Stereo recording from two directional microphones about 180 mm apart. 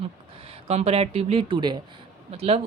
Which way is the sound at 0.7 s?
35° right (ahead or behind).